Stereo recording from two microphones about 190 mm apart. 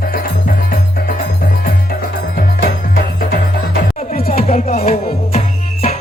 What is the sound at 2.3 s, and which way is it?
Music, 50° left (ahead or behind).